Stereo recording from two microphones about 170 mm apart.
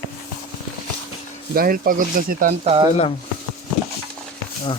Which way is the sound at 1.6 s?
60° right (ahead or behind).